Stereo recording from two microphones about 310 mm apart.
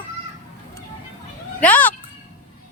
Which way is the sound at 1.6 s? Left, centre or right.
Centre.